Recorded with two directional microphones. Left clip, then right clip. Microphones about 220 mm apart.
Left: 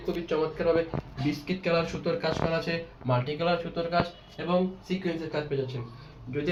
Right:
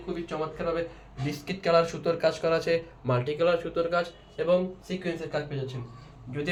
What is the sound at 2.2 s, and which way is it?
Speech, 50° right (ahead or behind).